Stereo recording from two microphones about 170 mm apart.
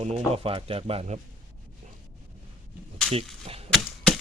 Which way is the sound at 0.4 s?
35° right (ahead or behind).